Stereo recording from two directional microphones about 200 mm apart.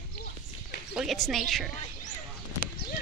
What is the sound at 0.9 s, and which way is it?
Speech, centre (ahead or behind).